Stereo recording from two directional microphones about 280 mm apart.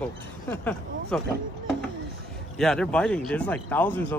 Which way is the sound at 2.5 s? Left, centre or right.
Centre.